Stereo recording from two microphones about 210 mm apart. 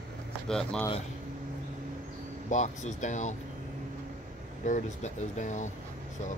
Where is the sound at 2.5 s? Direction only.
35° left (ahead or behind).